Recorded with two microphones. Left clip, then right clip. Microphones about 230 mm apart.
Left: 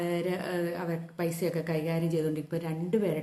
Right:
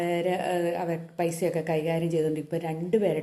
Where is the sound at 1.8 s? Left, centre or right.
Left.